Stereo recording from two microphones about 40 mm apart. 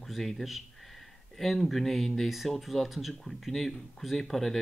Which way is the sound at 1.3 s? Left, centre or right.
Centre.